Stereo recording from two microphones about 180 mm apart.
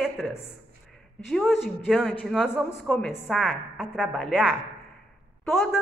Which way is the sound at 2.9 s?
10° left (ahead or behind).